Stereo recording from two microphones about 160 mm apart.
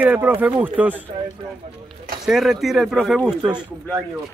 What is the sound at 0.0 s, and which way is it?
Speech, 10° right (ahead or behind).